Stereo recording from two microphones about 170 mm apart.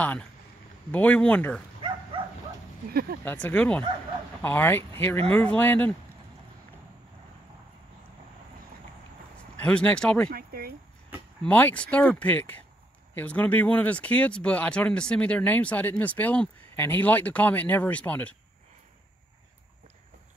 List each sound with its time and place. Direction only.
0.0 s speech: 10° left (ahead or behind)
2.9 s speech: 65° right (ahead or behind)
3.3 s speech: 10° left (ahead or behind)
9.6 s speech: 5° left (ahead or behind)
10.3 s speech: 60° right (ahead or behind)
11.4 s speech: 10° left (ahead or behind)